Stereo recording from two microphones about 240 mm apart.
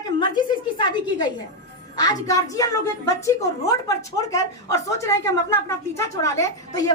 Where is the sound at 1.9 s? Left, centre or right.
Centre.